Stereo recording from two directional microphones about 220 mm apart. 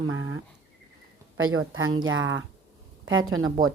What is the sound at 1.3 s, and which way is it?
Speech, 70° right (ahead or behind).